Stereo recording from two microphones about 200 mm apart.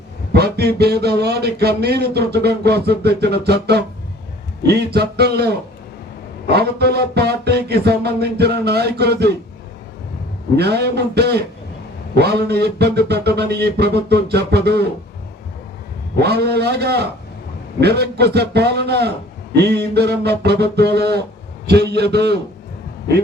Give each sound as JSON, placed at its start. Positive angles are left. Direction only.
{"t": 0.3, "sound": "speech", "side_deg": -55}
{"t": 6.5, "sound": "speech", "side_deg": -55}
{"t": 10.6, "sound": "speech", "side_deg": -55}
{"t": 16.2, "sound": "speech", "side_deg": -55}